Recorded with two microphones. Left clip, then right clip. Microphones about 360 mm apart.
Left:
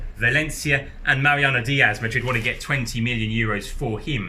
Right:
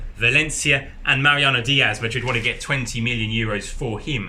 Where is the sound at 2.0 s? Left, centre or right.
Centre.